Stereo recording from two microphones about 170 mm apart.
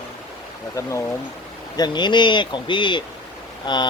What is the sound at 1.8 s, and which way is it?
Speech, 25° left (ahead or behind).